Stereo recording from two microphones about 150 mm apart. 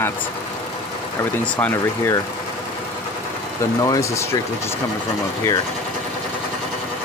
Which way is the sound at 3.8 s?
20° left (ahead or behind).